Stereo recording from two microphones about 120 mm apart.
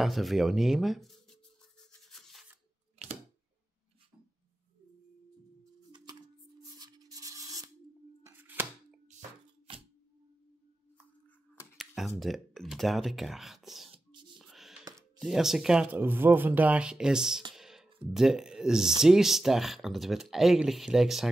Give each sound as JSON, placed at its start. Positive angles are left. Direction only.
{"t": 0.0, "sound": "speech", "side_deg": 0}
{"t": 1.9, "sound": "a sound", "side_deg": 5}
{"t": 5.9, "sound": "music", "side_deg": -40}
{"t": 6.6, "sound": "rub", "side_deg": -30}
{"t": 8.3, "sound": "a sound", "side_deg": -15}
{"t": 9.7, "sound": "camera", "side_deg": -45}
{"t": 11.7, "sound": "speech", "side_deg": 0}
{"t": 14.4, "sound": "a sound", "side_deg": 0}
{"t": 15.1, "sound": "speech", "side_deg": 0}
{"t": 16.0, "sound": "speech", "side_deg": -15}
{"t": 17.6, "sound": "music", "side_deg": -5}
{"t": 18.1, "sound": "speech", "side_deg": -5}